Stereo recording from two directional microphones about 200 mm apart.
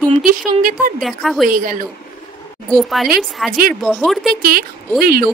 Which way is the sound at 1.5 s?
45° right (ahead or behind).